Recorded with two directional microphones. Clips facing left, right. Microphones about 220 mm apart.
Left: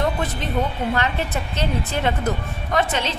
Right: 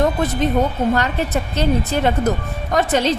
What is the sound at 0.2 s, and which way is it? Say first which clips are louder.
Speech: right 6 dB; 45° right (ahead or behind).